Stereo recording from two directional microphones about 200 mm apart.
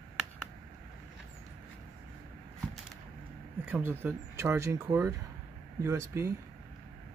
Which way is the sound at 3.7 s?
10° right (ahead or behind).